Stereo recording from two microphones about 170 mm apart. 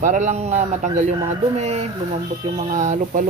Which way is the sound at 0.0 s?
45° right (ahead or behind).